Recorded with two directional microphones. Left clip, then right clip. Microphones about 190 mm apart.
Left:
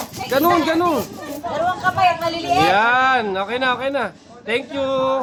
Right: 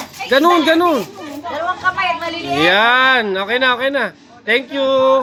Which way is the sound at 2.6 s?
5° right (ahead or behind).